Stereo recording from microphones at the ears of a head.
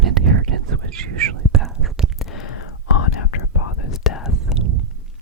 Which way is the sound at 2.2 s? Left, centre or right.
Left.